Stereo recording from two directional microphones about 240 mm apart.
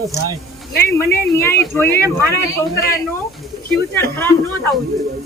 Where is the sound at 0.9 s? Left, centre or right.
Centre.